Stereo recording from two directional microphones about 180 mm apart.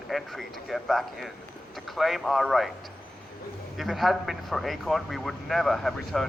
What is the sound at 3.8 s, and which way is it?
Speech, centre (ahead or behind).